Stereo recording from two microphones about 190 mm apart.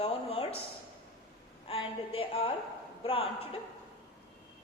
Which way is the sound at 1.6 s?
30° left (ahead or behind).